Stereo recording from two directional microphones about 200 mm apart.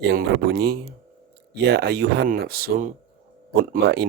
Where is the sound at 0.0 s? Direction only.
55° right (ahead or behind).